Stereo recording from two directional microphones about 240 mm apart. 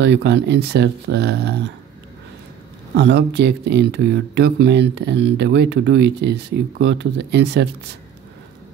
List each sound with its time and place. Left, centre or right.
0.0 s speech: right
3.0 s speech: right